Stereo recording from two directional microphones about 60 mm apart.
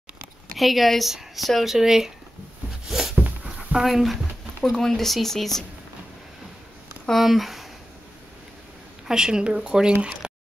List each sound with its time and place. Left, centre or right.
0.6 s speech: centre
2.9 s a sound: centre
3.4 s dog: centre
4.7 s speech: centre
7.1 s speech: centre
9.0 s speech: centre
10.2 s a sound: centre